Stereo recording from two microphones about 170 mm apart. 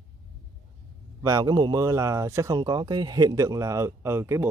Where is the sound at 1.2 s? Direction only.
20° right (ahead or behind).